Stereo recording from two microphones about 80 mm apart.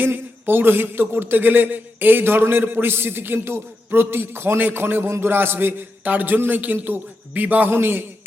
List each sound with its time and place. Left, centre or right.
0.0 s speech: right